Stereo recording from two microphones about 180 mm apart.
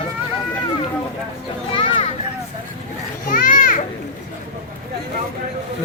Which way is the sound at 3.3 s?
50° left (ahead or behind).